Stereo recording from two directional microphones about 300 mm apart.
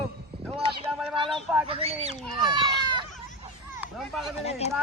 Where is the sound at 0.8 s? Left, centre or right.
Centre.